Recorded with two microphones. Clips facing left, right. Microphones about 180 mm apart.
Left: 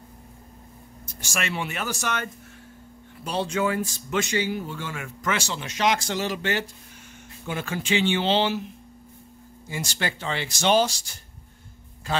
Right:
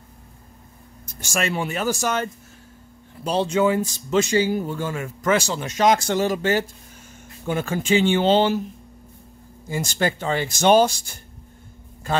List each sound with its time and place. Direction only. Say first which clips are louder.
1.3 s speech: right 5 dB; 40° right (ahead or behind)
3.3 s speech: right 6 dB; 30° right (ahead or behind); by 8.6 s 45° right (ahead or behind)
9.7 s a man's voice: right 7 dB; 45° right (ahead or behind)